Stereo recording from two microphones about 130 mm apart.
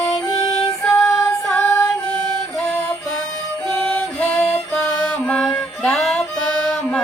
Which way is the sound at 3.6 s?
5° left (ahead or behind).